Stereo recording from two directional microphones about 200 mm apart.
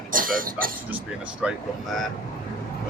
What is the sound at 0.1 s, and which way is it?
Speech, 45° right (ahead or behind).